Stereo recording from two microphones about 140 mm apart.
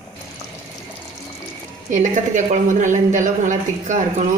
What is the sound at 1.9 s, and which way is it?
A woman's voice, 60° right (ahead or behind).